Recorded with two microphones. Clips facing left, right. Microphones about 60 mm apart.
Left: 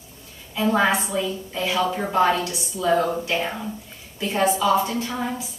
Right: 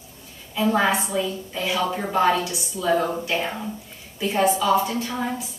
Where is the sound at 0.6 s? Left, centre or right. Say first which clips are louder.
Even; centre.